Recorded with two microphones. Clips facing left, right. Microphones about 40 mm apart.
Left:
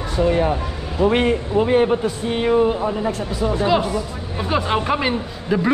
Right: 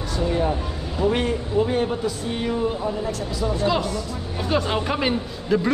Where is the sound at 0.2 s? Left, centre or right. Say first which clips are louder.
Left 5 dB; left.